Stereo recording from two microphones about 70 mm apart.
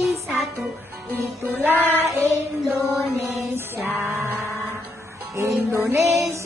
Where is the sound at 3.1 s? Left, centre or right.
Right.